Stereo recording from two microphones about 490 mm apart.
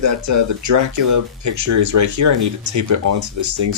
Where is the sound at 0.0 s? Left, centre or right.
Right.